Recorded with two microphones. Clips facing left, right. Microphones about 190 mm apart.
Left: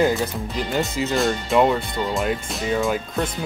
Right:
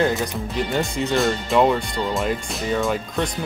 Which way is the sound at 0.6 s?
Centre (ahead or behind).